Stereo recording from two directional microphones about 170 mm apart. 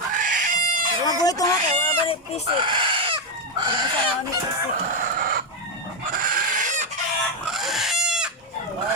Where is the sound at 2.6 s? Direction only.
30° right (ahead or behind).